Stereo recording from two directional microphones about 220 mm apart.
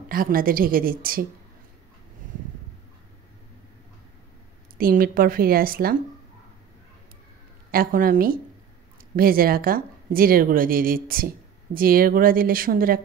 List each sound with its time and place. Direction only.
0.1 s a woman's voice: 40° right (ahead or behind)
4.7 s a woman's voice: 40° right (ahead or behind)
7.7 s a woman's voice: 40° right (ahead or behind)